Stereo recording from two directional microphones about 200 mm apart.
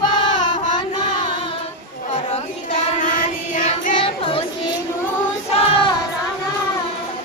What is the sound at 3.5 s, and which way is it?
Child singing, 40° left (ahead or behind).